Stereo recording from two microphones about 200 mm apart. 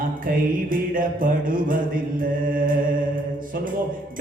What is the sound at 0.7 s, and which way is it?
Music, 45° right (ahead or behind).